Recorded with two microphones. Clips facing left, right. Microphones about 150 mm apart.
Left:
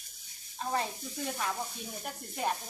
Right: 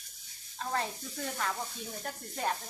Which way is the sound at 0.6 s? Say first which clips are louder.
Left 1 dB; 15° left (ahead or behind).